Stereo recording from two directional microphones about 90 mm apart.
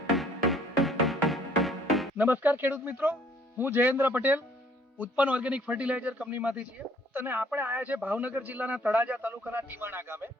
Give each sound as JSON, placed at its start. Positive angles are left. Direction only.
{"t": 0.2, "sound": "music", "side_deg": 0}
{"t": 2.1, "sound": "a man's voice", "side_deg": -20}